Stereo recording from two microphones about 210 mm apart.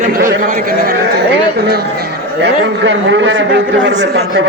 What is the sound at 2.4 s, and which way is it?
A man's voice, 60° right (ahead or behind).